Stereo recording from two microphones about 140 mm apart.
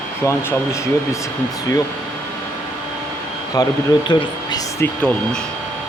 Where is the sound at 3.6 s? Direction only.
25° left (ahead or behind).